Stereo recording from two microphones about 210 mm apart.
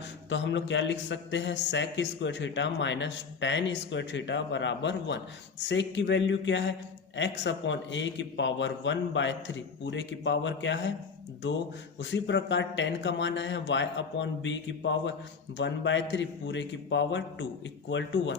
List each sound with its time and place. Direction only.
0.3 s a man's voice: 60° left (ahead or behind)
11.9 s a man's voice: 60° left (ahead or behind)